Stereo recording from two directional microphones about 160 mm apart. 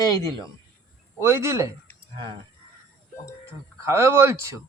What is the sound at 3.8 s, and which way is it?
Speech, 15° right (ahead or behind).